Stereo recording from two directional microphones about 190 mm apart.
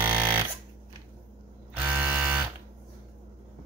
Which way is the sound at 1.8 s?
10° right (ahead or behind).